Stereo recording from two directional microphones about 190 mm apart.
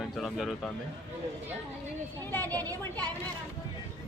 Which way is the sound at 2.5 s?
20° right (ahead or behind).